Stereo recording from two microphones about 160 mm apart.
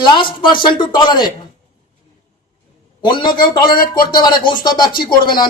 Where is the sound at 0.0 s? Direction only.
30° left (ahead or behind).